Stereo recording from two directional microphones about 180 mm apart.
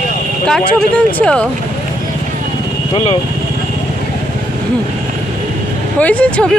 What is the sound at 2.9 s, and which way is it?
Speech, 35° left (ahead or behind).